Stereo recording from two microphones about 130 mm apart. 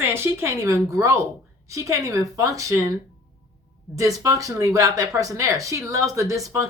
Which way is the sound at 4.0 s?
25° right (ahead or behind).